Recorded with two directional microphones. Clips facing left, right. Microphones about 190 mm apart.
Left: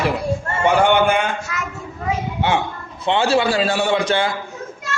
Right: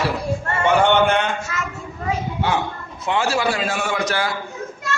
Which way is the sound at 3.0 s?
30° left (ahead or behind).